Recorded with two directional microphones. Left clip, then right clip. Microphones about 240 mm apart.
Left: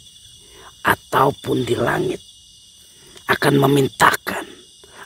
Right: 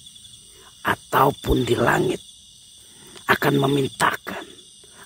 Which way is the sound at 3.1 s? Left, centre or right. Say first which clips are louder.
Left 2 dB; centre.